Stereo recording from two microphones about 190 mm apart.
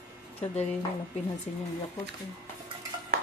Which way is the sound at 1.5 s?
35° left (ahead or behind).